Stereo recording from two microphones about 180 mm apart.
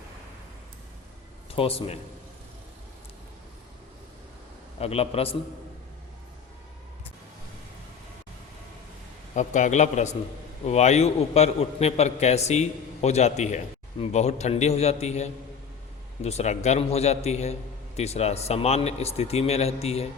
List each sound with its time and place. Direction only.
1.5 s a man's voice: 30° left (ahead or behind)
4.8 s a man's voice: 35° left (ahead or behind)
9.3 s a man's voice: 40° left (ahead or behind)